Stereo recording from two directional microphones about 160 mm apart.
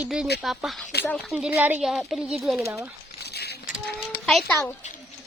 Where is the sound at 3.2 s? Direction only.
90° left.